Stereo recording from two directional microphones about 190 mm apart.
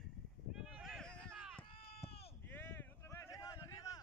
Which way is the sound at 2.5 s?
10° left (ahead or behind).